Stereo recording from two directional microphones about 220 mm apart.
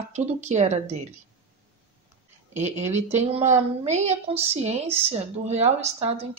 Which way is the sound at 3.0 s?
30° right (ahead or behind).